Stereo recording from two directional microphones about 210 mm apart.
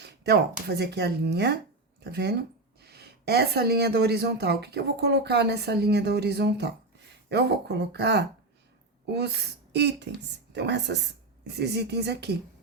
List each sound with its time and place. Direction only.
0.0 s a woman's voice: 50° right (ahead or behind)